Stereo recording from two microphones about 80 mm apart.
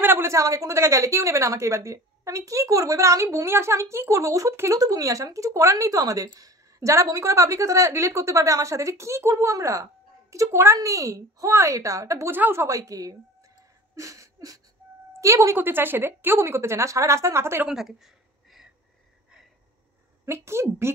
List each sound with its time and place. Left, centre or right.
0.0 s a sound: right
0.3 s a woman's voice: right
12.4 s a woman's voice: right
12.6 s a woman's voice: right
13.9 s a sound: right
15.1 s a woman's voice: right
15.5 s a woman's voice: right
17.6 s a sound: centre
20.2 s a woman's voice: right